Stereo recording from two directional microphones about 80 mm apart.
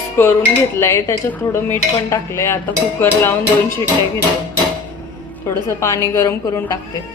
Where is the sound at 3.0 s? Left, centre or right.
Left.